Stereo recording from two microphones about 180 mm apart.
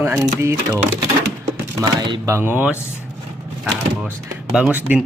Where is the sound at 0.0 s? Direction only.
15° right (ahead or behind).